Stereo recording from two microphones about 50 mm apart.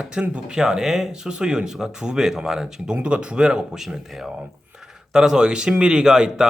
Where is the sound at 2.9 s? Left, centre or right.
Right.